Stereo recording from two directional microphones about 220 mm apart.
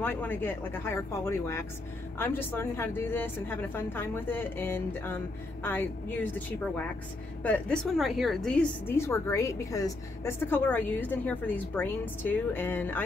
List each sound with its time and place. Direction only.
0.0 s a woman's voice: 10° left (ahead or behind)
7.4 s a woman's voice: 5° left (ahead or behind)